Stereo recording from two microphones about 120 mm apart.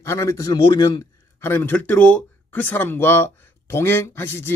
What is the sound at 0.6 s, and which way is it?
Speech, 40° left (ahead or behind).